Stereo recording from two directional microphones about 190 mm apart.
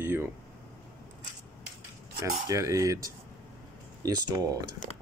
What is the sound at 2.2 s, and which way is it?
Speech, 15° right (ahead or behind).